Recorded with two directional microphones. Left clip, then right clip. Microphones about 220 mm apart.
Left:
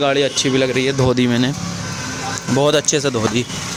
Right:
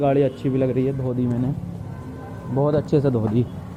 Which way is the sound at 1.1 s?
85° left.